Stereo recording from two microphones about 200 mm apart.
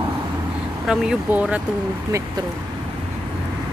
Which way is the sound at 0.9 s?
5° right (ahead or behind).